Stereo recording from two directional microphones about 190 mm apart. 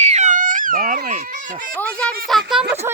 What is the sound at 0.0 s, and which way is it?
Cat, 40° right (ahead or behind).